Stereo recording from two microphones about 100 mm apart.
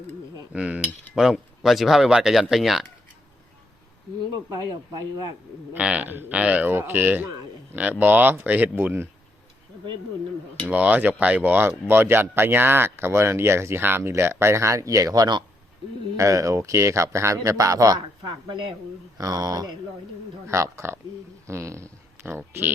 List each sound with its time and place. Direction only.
0.5 s cutlery: 10° right (ahead or behind)
4.4 s speech: 40° right (ahead or behind)
5.7 s speech: 10° right (ahead or behind)
10.7 s speech: 15° right (ahead or behind); by 19.7 s 40° right (ahead or behind)
20.5 s speech: 30° right (ahead or behind)